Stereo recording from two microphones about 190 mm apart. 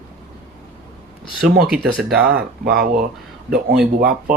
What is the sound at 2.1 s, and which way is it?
Speech, 55° right (ahead or behind).